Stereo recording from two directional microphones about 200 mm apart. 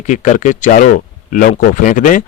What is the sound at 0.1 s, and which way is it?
Speech, 40° left (ahead or behind).